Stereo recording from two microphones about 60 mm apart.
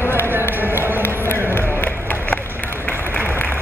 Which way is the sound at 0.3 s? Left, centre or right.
Right.